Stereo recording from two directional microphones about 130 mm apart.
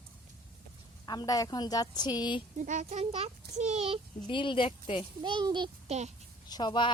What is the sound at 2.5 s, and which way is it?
A child's voice, 75° right (ahead or behind).